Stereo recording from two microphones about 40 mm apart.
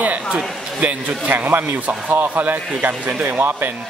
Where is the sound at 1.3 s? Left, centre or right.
Right.